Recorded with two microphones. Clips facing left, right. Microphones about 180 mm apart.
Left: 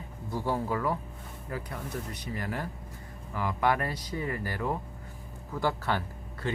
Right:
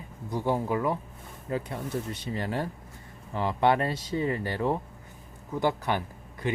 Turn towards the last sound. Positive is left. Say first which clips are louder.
# right 2 dB
turn(degrees=-20)  # may be behind; listen again after turning